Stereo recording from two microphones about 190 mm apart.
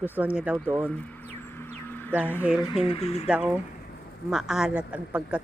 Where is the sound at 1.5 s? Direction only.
10° left (ahead or behind).